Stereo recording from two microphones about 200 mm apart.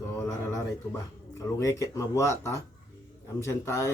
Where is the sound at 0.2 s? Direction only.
15° left (ahead or behind).